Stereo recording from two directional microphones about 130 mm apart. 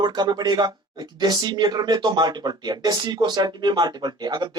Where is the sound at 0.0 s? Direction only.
35° right (ahead or behind).